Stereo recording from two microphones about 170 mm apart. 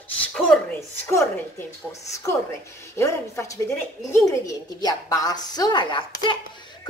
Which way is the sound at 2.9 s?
15° left (ahead or behind).